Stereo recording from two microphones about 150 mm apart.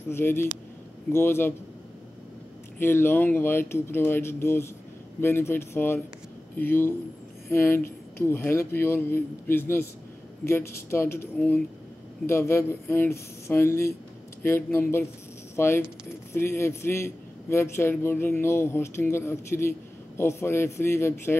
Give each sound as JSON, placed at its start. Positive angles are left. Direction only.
{"t": 0.1, "sound": "a man's voice", "side_deg": 15}
{"t": 2.8, "sound": "a man's voice", "side_deg": 15}